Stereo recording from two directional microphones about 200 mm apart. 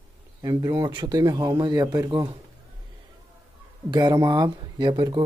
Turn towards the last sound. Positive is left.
turn(degrees=-20)  # may be behind; listen again after turning